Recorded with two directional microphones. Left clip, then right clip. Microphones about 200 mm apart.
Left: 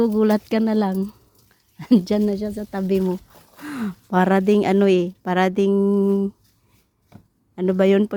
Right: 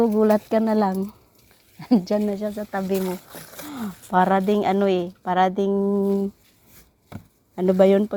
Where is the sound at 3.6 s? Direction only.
30° left (ahead or behind).